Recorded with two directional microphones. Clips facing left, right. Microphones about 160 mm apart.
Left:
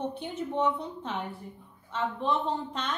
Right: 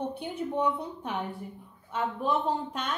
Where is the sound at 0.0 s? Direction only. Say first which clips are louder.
Right 1 dB; 10° right (ahead or behind).